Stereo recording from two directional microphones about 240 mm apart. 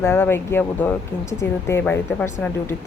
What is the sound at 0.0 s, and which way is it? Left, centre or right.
Speech, centre.